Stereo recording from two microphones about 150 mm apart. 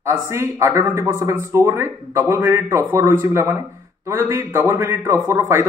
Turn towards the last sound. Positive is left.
turn(degrees=-20)  # may be behind; listen again after turning